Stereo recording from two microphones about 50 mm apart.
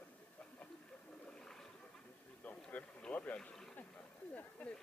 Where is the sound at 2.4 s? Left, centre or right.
Left.